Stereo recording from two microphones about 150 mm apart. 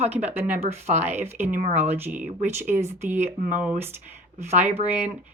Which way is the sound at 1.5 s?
50° right (ahead or behind).